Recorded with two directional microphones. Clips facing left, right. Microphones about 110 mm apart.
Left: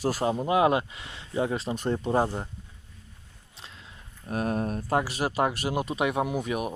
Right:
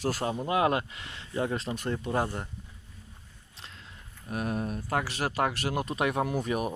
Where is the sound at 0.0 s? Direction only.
15° left (ahead or behind).